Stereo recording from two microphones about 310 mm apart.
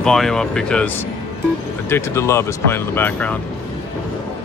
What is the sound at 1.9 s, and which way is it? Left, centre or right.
Speech, centre.